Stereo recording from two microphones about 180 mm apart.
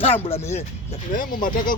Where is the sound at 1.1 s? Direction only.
50° left (ahead or behind).